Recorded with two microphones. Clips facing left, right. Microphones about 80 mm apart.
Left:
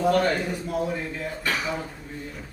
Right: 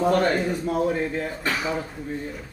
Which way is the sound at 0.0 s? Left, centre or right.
Right.